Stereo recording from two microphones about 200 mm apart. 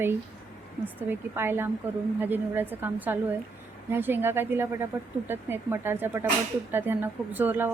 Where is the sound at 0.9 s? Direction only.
10° right (ahead or behind).